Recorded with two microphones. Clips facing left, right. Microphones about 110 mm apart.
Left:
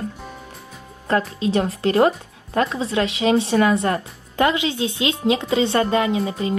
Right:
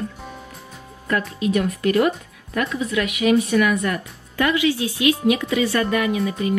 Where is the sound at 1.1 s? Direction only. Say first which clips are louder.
Left 1 dB; 30° left (ahead or behind).